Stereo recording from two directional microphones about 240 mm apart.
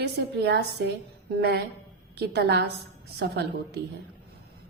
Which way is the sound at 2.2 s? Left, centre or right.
Right.